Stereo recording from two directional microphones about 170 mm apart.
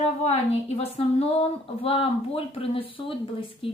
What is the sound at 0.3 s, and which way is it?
A woman's voice, 40° left (ahead or behind).